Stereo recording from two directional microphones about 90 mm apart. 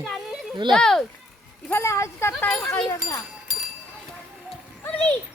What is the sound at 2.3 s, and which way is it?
Speech, 10° left (ahead or behind).